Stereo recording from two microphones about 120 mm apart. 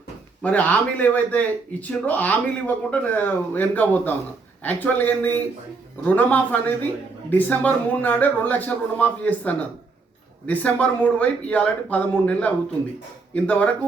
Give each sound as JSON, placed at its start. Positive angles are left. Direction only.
{"t": 0.4, "sound": "speech", "side_deg": 10}